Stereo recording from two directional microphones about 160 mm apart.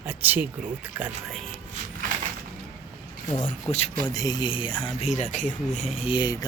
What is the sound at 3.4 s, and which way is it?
Speech, 45° left (ahead or behind).